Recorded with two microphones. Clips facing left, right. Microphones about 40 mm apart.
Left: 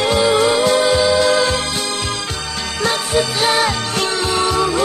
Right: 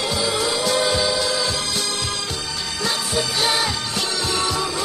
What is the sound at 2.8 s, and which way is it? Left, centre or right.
Music, left.